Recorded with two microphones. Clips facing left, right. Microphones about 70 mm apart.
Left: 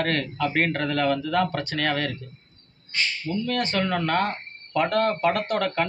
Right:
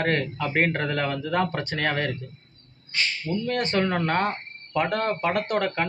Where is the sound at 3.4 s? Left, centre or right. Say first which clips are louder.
Right 1 dB; right.